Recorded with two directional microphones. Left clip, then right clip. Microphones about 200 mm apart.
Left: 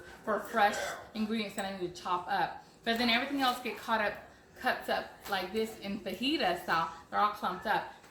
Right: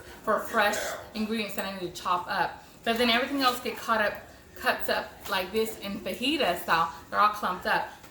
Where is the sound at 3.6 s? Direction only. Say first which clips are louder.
Right 5 dB; 10° right (ahead or behind).